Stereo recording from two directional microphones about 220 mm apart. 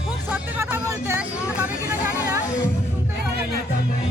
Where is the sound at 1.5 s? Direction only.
10° right (ahead or behind).